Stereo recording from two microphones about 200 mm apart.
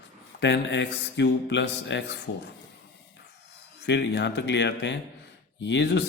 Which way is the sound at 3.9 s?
60° left (ahead or behind).